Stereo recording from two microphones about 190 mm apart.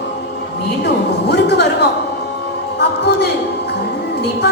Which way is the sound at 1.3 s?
60° left (ahead or behind).